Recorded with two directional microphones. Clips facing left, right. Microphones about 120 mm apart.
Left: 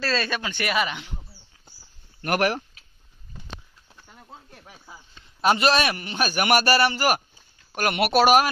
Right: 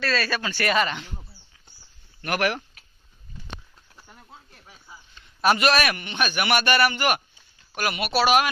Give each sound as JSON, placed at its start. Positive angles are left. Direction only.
{"t": 0.0, "sound": "speech", "side_deg": 25}
{"t": 2.2, "sound": "a man's voice", "side_deg": 40}
{"t": 4.5, "sound": "snake", "side_deg": 50}
{"t": 5.4, "sound": "a man's voice", "side_deg": 25}
{"t": 7.9, "sound": "speech", "side_deg": 65}
{"t": 8.2, "sound": "speech", "side_deg": 45}